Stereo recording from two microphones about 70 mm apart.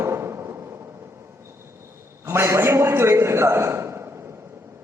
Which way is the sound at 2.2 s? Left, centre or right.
Right.